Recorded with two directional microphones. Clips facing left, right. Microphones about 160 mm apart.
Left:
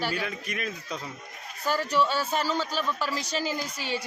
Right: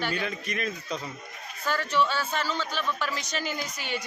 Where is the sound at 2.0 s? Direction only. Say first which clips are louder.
Left 1 dB; 10° left (ahead or behind).